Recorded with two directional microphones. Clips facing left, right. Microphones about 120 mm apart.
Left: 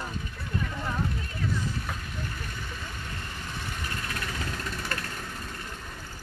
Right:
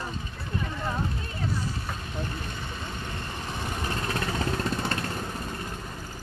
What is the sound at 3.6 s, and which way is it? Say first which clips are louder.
Vehicle: right 5 dB; 35° right (ahead or behind).